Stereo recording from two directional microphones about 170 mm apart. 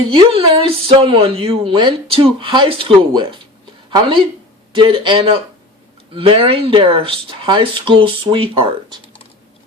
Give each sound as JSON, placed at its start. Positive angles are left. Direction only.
{"t": 0.1, "sound": "a woman's voice", "side_deg": -35}